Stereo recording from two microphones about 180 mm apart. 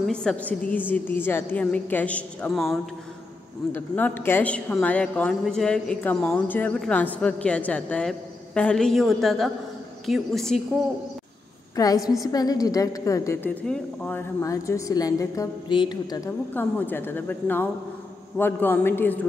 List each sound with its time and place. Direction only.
0.0 s a woman's voice: centre (ahead or behind)
11.7 s a woman's voice: 20° left (ahead or behind)
16.5 s a woman's voice: 10° left (ahead or behind)